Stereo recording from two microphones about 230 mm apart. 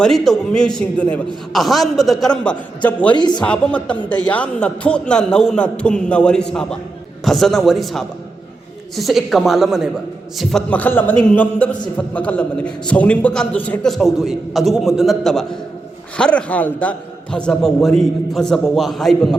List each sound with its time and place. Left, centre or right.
0.0 s a man's voice: centre
3.2 s speech: centre
3.4 s a man's voice: centre